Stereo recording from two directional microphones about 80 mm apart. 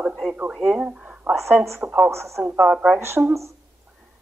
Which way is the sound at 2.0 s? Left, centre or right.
Right.